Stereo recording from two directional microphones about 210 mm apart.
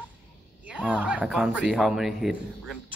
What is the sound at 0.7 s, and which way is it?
Speech, 5° right (ahead or behind).